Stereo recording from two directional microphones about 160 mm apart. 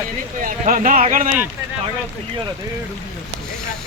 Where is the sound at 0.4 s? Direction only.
55° right (ahead or behind).